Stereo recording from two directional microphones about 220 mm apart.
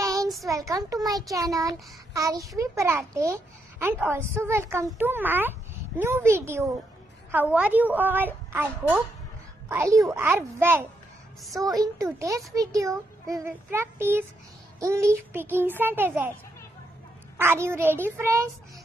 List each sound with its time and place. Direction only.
0.0 s child singing: 15° right (ahead or behind)
0.5 s a woman's voice: 15° right (ahead or behind)
17.4 s a woman's voice: 10° right (ahead or behind)